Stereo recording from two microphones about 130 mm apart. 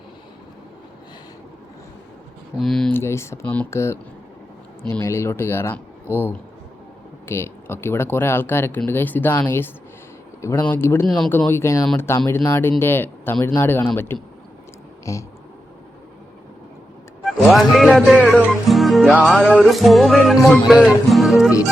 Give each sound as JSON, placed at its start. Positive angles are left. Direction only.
{"t": 2.6, "sound": "speech", "side_deg": 5}
{"t": 2.9, "sound": "speech", "side_deg": 20}
{"t": 3.7, "sound": "speech", "side_deg": 20}
{"t": 7.3, "sound": "speech", "side_deg": 20}
{"t": 17.2, "sound": "speech", "side_deg": 0}
{"t": 18.7, "sound": "music", "side_deg": 0}
{"t": 19.2, "sound": "speech", "side_deg": 0}
{"t": 20.7, "sound": "music", "side_deg": -5}